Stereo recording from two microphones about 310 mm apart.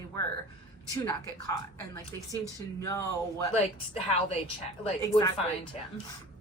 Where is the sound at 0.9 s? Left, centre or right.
Centre.